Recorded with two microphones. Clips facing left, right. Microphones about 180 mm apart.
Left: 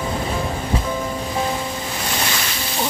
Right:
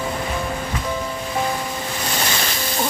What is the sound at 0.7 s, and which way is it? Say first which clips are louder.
Music: left 4 dB; 30° left (ahead or behind).